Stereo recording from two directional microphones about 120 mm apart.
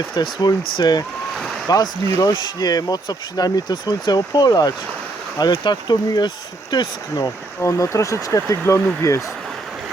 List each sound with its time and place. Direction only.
0.2 s speech: 35° left (ahead or behind)
7.6 s speech: 25° left (ahead or behind)